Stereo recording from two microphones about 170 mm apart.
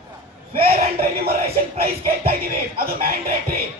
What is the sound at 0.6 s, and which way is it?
Music, 65° right (ahead or behind).